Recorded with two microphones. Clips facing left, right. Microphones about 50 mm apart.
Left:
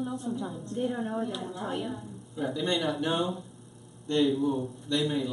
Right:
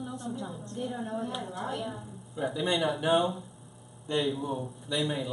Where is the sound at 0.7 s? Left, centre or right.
Centre.